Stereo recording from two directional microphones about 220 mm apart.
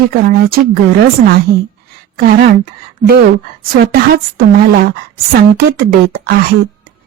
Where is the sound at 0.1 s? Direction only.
45° right (ahead or behind).